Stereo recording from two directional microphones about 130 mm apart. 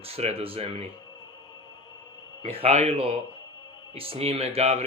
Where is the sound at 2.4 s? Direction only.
55° right (ahead or behind).